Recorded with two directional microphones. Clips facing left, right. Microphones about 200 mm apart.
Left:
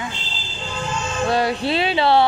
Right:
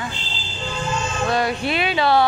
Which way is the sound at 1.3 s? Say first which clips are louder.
Left 2 dB; 30° left (ahead or behind).